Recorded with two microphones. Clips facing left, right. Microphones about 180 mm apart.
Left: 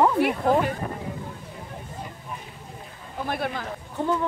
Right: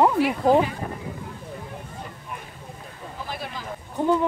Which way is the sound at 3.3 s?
60° left (ahead or behind).